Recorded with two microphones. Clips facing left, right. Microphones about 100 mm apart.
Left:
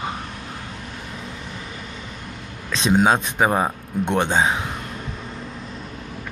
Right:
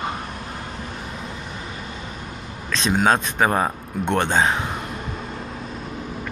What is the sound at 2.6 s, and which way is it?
A man's voice, 15° left (ahead or behind).